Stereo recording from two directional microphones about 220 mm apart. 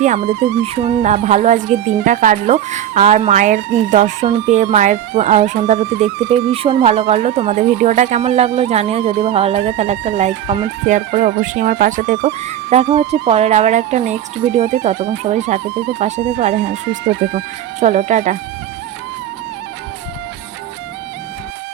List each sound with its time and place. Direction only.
0.6 s speech: 30° right (ahead or behind)